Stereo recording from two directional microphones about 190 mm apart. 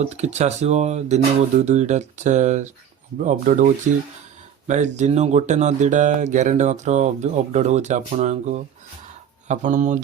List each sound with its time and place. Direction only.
0.0 s speech: 35° right (ahead or behind)
4.9 s speech: 35° right (ahead or behind)